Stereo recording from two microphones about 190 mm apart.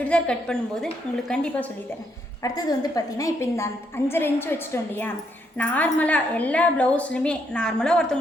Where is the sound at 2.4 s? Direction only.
20° left (ahead or behind).